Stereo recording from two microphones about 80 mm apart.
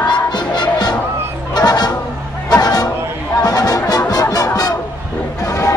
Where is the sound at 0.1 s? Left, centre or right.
Left.